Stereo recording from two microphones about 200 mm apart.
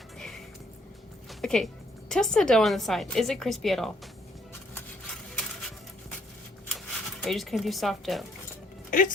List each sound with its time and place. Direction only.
0.2 s music: centre (ahead or behind)
1.3 s speech: centre (ahead or behind)
6.7 s speech: centre (ahead or behind)
8.9 s speech: 40° left (ahead or behind)